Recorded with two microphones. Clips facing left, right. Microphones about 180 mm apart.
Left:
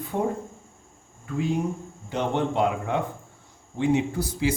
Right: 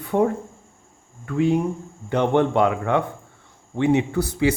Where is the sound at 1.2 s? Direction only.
65° right (ahead or behind).